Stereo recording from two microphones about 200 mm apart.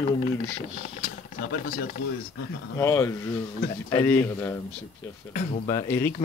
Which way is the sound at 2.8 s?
15° left (ahead or behind).